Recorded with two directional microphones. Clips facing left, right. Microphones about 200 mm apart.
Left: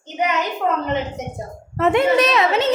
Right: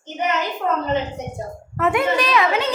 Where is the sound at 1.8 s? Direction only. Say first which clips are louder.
Left 4 dB; 25° left (ahead or behind).